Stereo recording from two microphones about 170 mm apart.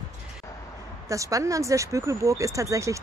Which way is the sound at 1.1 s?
20° right (ahead or behind).